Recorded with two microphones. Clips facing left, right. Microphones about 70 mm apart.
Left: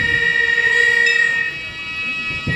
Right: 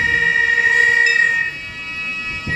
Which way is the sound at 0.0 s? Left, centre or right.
Centre.